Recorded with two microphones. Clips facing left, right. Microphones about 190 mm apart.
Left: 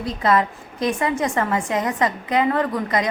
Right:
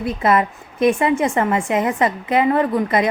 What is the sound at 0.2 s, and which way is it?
A woman's voice, 20° right (ahead or behind).